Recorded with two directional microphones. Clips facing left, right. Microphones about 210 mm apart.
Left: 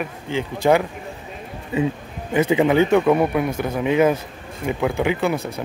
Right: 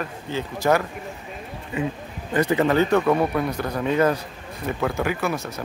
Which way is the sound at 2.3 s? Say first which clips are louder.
Left 3 dB; 10° left (ahead or behind).